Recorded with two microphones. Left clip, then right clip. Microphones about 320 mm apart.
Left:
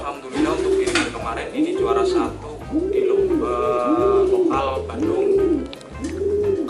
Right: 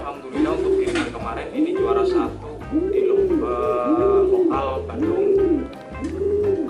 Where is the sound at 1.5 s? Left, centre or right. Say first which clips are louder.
Even; centre.